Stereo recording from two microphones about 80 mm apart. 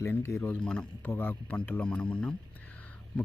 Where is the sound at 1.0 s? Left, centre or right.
Left.